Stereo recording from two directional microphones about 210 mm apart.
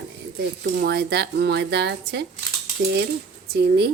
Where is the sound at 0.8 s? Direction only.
50° right (ahead or behind).